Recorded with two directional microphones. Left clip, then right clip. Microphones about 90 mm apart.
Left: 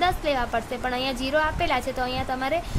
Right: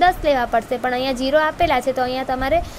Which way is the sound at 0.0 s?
50° right (ahead or behind).